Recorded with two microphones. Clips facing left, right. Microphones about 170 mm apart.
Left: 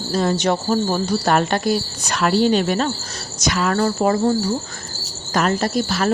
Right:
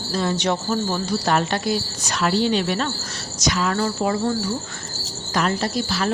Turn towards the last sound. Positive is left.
turn(degrees=50)  # may be behind; listen again after turning